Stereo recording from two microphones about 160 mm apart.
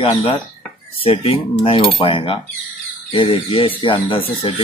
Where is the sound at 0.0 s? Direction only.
40° left (ahead or behind).